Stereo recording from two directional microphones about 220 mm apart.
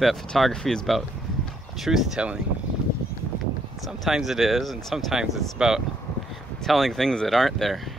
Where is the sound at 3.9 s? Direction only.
Centre (ahead or behind).